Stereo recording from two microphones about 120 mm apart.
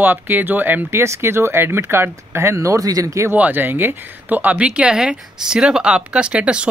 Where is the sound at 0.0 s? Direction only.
15° right (ahead or behind).